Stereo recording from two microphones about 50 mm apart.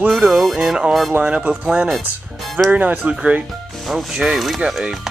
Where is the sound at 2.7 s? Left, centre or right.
Right.